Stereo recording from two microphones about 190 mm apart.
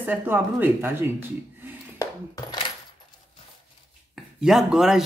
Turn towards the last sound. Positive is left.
turn(degrees=0)  # may be behind; listen again after turning